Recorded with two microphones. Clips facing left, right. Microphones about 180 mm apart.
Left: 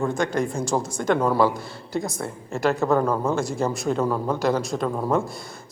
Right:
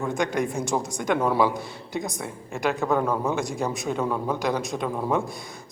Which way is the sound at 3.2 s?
15° right (ahead or behind).